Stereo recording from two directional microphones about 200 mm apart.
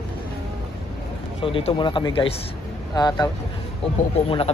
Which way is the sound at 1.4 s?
25° left (ahead or behind).